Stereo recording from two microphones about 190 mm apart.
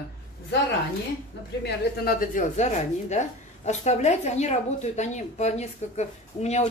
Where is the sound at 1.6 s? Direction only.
50° left (ahead or behind).